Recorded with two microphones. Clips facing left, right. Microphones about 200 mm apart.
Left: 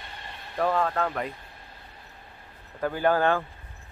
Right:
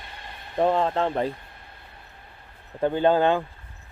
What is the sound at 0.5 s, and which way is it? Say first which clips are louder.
Speech: right 4 dB; 25° right (ahead or behind).